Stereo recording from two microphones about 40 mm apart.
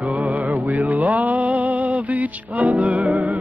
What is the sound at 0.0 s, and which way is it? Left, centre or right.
Music, right.